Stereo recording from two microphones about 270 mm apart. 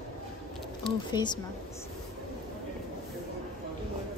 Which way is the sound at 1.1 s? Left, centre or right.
Centre.